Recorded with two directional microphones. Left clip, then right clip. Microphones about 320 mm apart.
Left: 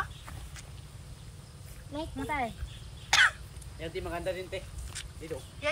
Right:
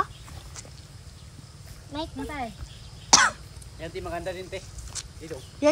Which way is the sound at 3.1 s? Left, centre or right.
Centre.